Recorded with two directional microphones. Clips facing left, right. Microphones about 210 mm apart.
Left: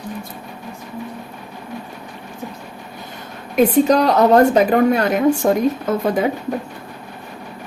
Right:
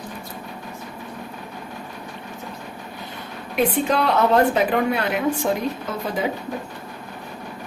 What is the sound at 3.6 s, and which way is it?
Speech, 40° left (ahead or behind).